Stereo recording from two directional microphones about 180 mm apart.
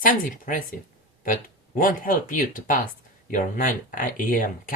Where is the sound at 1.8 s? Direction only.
50° left (ahead or behind).